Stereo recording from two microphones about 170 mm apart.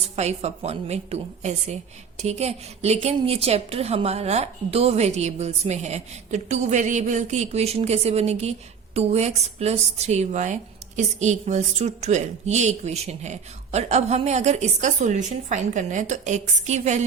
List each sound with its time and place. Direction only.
0.0 s a woman's voice: 40° right (ahead or behind)